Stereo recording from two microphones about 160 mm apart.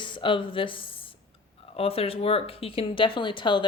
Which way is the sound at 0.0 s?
30° left (ahead or behind).